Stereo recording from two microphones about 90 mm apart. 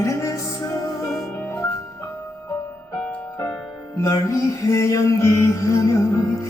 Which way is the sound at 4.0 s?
35° left (ahead or behind).